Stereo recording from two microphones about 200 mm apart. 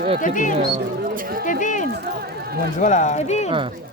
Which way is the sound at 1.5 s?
40° left (ahead or behind).